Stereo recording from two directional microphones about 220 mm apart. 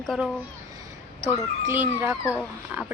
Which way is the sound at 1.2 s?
10° right (ahead or behind).